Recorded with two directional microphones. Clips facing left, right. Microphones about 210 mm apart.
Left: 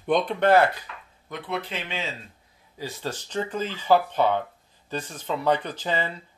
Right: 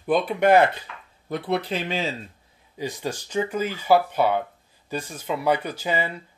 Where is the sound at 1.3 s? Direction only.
35° right (ahead or behind).